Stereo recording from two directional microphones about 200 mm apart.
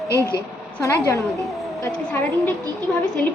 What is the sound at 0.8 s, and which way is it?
A woman's voice, 15° left (ahead or behind).